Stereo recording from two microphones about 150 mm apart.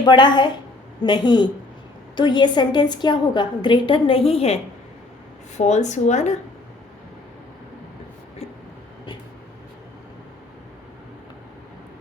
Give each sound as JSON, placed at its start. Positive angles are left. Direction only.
{"t": 0.0, "sound": "a woman's voice", "side_deg": 30}